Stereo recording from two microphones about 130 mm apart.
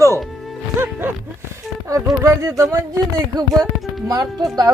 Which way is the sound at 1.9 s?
25° right (ahead or behind).